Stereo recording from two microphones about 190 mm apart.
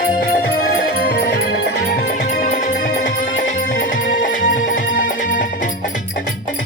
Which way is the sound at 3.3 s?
85° left.